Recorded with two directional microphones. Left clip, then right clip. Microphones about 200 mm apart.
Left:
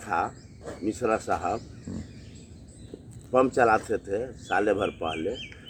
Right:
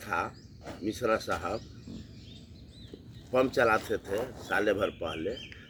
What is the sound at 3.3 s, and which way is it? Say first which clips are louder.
Speech: left 4 dB; 20° right (ahead or behind).